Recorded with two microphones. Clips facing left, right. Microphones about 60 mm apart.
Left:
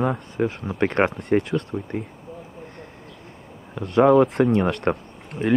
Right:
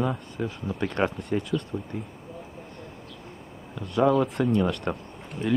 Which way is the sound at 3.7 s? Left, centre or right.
Left.